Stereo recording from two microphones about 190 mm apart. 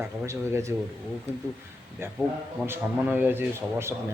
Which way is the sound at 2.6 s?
10° right (ahead or behind).